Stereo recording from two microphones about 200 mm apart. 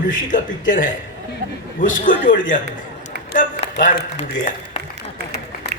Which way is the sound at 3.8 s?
40° left (ahead or behind).